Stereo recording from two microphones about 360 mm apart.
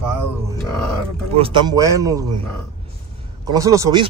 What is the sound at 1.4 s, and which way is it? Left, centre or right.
Speech, centre.